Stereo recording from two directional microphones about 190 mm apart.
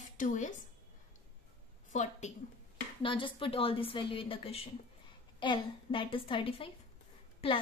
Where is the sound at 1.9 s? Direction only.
40° left (ahead or behind).